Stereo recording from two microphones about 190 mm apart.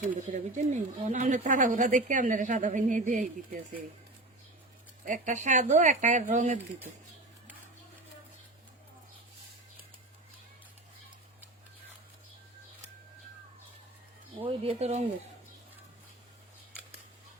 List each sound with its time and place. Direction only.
0.0 s speech: 40° right (ahead or behind)
5.0 s speech: 40° right (ahead or behind)
14.4 s speech: 30° right (ahead or behind)